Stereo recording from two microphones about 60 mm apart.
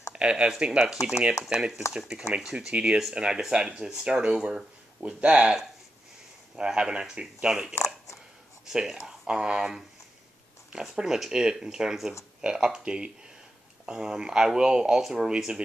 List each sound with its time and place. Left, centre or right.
0.1 s speech: centre
5.0 s speech: centre
7.7 s a sound: left
8.6 s speech: centre